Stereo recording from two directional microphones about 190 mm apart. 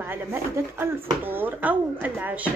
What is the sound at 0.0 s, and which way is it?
A woman's voice, 10° right (ahead or behind).